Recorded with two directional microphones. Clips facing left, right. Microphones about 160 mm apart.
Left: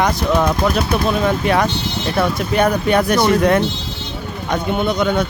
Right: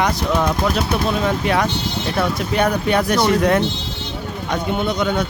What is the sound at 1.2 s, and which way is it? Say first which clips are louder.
Speech: left 2 dB; 55° left (ahead or behind).